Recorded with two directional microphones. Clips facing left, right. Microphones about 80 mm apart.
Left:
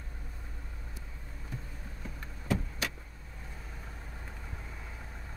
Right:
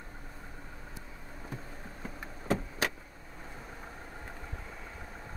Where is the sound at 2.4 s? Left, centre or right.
Right.